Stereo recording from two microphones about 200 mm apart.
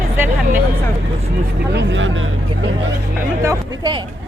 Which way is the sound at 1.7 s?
60° right (ahead or behind).